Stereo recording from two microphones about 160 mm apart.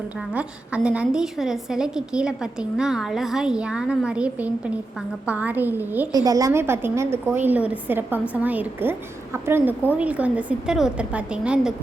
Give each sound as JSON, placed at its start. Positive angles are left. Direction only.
{"t": 0.2, "sound": "a woman's voice", "side_deg": -5}
{"t": 6.1, "sound": "a woman's voice", "side_deg": -20}